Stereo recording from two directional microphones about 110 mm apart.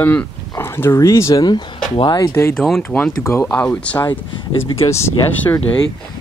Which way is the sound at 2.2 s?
25° left (ahead or behind).